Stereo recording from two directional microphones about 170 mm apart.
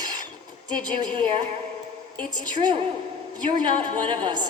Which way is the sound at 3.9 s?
30° right (ahead or behind).